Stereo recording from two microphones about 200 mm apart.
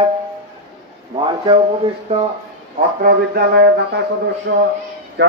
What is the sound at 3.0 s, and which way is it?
Speech, 50° right (ahead or behind).